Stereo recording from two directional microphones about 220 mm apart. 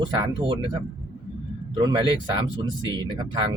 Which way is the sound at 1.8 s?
20° right (ahead or behind).